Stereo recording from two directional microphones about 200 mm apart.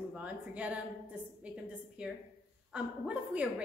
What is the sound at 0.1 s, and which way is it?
A woman's voice, 5° right (ahead or behind).